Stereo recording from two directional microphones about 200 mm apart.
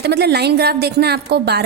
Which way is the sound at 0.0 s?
55° right (ahead or behind).